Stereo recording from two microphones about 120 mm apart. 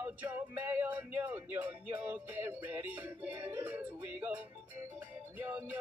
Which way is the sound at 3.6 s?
15° right (ahead or behind).